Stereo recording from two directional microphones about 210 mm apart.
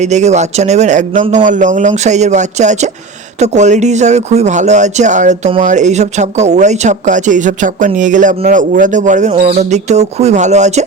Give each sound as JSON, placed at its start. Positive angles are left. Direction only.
{"t": 0.0, "sound": "speech", "side_deg": -35}